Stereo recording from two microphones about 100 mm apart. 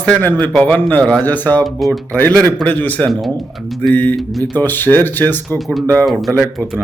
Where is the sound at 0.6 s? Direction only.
15° left (ahead or behind).